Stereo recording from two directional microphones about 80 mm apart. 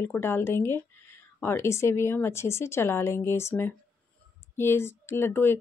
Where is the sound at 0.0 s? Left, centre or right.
Left.